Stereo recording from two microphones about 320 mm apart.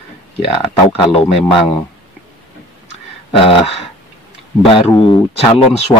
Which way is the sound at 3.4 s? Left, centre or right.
Centre.